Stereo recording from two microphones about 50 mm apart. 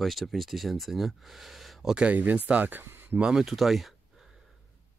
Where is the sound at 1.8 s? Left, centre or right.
Centre.